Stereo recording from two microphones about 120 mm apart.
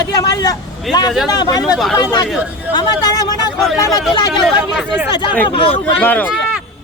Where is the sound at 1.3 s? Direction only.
35° left (ahead or behind).